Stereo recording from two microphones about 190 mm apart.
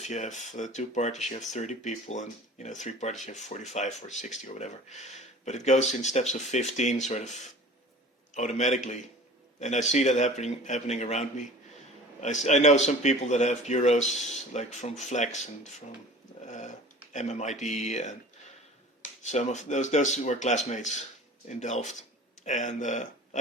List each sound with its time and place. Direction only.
0.0 s speech: 40° left (ahead or behind)
19.2 s speech: 40° left (ahead or behind)